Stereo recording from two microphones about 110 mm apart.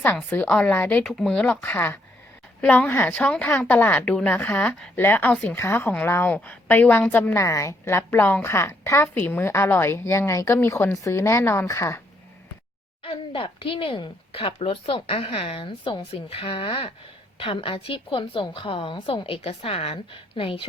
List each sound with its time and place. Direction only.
0.3 s a woman's voice: 15° left (ahead or behind)
1.0 s a woman's voice: 5° left (ahead or behind)
7.4 s a woman's voice: 30° left (ahead or behind)
13.0 s a woman's voice: 55° left (ahead or behind)